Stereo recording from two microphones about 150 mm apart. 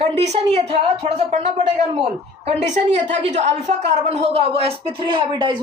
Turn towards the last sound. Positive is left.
turn(degrees=-35)  # may be behind; listen again after turning